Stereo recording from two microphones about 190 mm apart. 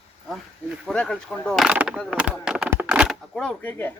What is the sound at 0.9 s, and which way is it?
Speech, 5° left (ahead or behind).